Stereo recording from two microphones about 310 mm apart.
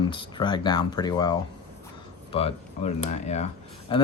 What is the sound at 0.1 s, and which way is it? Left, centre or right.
Speech, centre.